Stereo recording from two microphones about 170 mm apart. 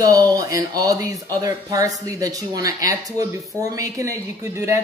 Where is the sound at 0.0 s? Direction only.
20° right (ahead or behind).